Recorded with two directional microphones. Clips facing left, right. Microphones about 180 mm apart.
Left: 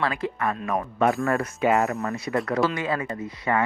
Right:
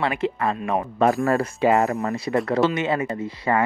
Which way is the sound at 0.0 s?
25° right (ahead or behind).